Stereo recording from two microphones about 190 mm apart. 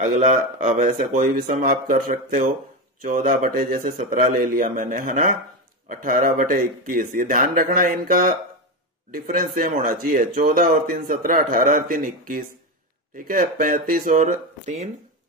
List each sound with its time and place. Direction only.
0.1 s speech: 45° right (ahead or behind)